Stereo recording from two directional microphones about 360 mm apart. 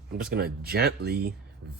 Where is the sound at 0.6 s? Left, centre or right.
Right.